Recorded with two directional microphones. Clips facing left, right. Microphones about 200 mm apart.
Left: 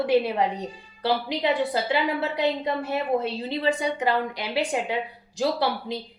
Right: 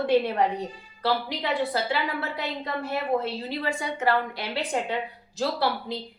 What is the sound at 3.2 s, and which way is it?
A woman's voice, 20° left (ahead or behind).